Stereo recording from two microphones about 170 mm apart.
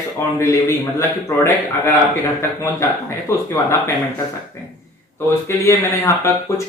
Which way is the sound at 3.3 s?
15° left (ahead or behind).